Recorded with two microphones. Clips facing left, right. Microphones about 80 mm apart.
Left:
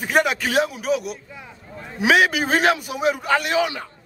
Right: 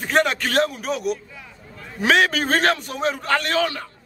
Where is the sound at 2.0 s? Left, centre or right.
Centre.